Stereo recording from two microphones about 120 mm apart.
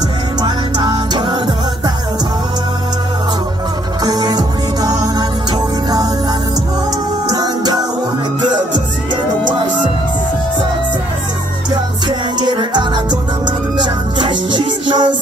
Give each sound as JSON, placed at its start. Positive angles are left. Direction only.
{"t": 0.4, "sound": "music", "side_deg": -40}
{"t": 4.0, "sound": "music", "side_deg": -35}
{"t": 7.3, "sound": "music", "side_deg": -35}
{"t": 12.4, "sound": "music", "side_deg": -40}